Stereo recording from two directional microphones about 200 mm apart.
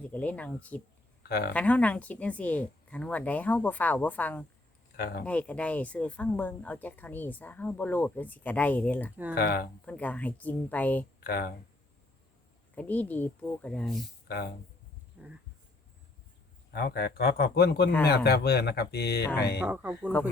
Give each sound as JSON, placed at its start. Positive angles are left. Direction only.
{"t": 0.0, "sound": "speech", "side_deg": 5}
{"t": 1.2, "sound": "speech", "side_deg": 55}
{"t": 1.5, "sound": "speech", "side_deg": 5}
{"t": 4.9, "sound": "speech", "side_deg": 50}
{"t": 5.2, "sound": "speech", "side_deg": 5}
{"t": 9.3, "sound": "speech", "side_deg": 50}
{"t": 9.8, "sound": "speech", "side_deg": 5}
{"t": 11.2, "sound": "speech", "side_deg": 50}
{"t": 12.7, "sound": "speech", "side_deg": 10}
{"t": 14.3, "sound": "speech", "side_deg": 55}
{"t": 15.2, "sound": "a sound", "side_deg": -5}
{"t": 16.7, "sound": "speech", "side_deg": 50}
{"t": 19.5, "sound": "speech", "side_deg": -10}